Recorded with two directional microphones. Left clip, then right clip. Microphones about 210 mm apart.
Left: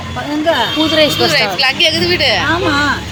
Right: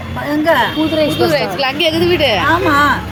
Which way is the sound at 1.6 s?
40° right (ahead or behind).